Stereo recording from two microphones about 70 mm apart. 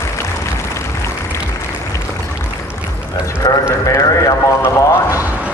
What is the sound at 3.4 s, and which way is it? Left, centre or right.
Speech, left.